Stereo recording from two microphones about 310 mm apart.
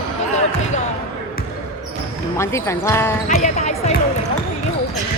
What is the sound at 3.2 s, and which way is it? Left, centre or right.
Speech, left.